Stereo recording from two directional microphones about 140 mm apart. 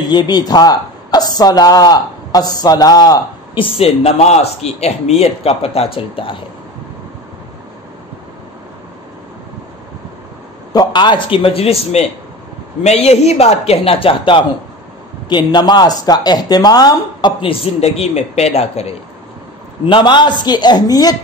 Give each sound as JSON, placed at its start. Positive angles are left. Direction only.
{"t": 0.1, "sound": "a woman's voice", "side_deg": 30}
{"t": 3.7, "sound": "a man's voice", "side_deg": 45}
{"t": 10.7, "sound": "a man's voice", "side_deg": 30}
{"t": 19.9, "sound": "speech", "side_deg": 35}